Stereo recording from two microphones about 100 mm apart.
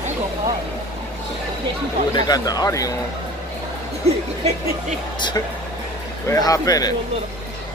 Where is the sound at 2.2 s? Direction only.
40° left (ahead or behind).